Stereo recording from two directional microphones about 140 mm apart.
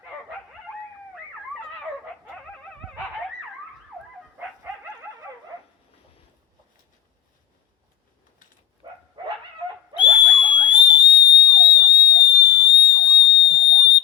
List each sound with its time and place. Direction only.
9.9 s whistle: 35° left (ahead or behind)
13.2 s fire alarm: 40° left (ahead or behind)